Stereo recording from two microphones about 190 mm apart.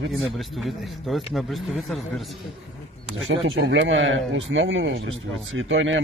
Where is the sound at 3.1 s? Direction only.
90° right.